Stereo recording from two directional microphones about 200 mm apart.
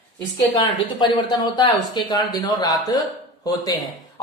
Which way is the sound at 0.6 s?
20° left (ahead or behind).